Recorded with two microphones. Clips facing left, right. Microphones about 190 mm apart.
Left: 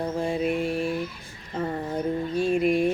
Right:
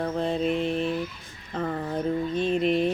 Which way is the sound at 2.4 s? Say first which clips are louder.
Left 3 dB; 10° left (ahead or behind).